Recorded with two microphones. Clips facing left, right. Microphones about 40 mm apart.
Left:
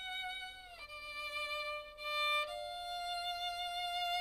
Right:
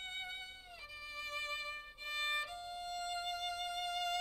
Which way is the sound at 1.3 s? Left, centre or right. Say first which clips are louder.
Left 2 dB; centre.